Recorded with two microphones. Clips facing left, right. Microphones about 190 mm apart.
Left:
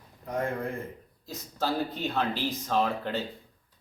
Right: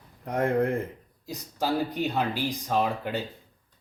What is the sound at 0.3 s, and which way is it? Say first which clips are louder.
Speech: right 6 dB; 75° right (ahead or behind).